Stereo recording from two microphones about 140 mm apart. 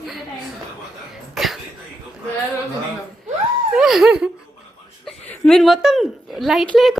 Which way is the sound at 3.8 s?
5° right (ahead or behind).